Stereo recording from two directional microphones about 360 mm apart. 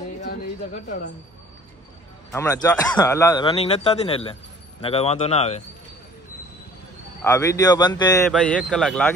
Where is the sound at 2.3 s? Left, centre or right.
Centre.